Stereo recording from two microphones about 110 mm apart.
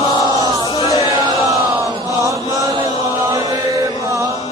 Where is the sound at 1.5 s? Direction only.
30° right (ahead or behind).